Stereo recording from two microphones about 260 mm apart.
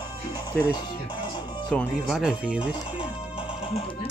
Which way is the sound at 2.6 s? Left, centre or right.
Centre.